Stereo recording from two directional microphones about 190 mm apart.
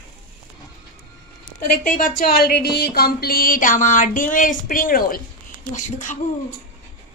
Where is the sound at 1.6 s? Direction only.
45° left (ahead or behind).